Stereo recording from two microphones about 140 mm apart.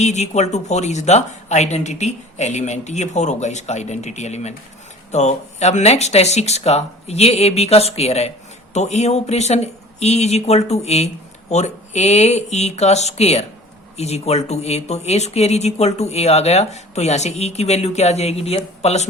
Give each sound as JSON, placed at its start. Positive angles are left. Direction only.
{"t": 0.0, "sound": "speech", "side_deg": 55}